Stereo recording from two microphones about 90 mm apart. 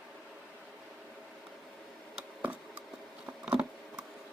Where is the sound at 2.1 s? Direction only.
15° right (ahead or behind).